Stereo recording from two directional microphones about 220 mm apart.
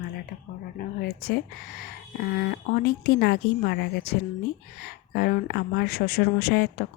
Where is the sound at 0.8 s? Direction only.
45° left (ahead or behind).